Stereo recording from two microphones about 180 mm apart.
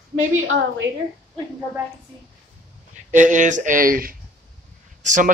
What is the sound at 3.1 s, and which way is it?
Speech, 45° right (ahead or behind).